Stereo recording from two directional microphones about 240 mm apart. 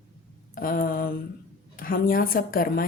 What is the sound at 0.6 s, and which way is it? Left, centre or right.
A woman's voice, left.